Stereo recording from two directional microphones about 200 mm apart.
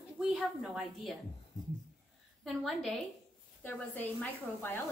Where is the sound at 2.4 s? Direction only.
Centre (ahead or behind).